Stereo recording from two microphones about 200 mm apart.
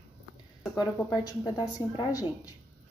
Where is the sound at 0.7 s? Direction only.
20° left (ahead or behind).